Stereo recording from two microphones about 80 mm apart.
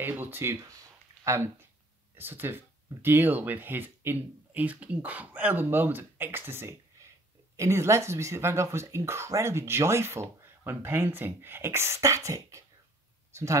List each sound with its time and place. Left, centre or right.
0.2 s speech: right
2.1 s speech: right
13.3 s a sound: right